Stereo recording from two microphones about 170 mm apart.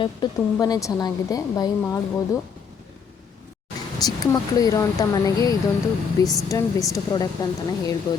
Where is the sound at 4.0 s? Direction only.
20° left (ahead or behind).